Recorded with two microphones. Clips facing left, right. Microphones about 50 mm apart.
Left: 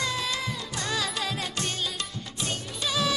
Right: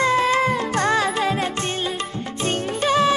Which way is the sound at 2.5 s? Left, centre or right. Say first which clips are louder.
Right 12 dB; right.